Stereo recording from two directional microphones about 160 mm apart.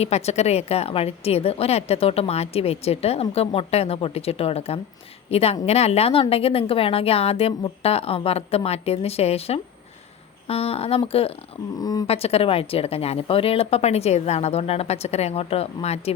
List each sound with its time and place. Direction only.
0.0 s a woman's voice: 40° left (ahead or behind)
11.8 s speech: 25° left (ahead or behind)
12.0 s a woman's voice: 40° left (ahead or behind)